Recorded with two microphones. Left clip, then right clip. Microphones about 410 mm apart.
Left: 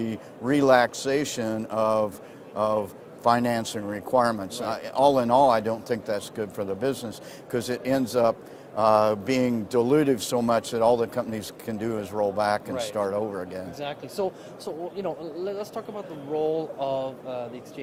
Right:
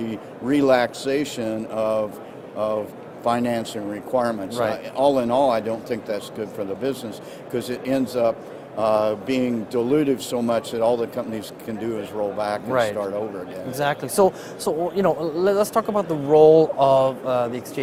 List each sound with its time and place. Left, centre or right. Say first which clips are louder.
0.0 s speech: right 2 dB; left
13.7 s a man's voice: right 13 dB; right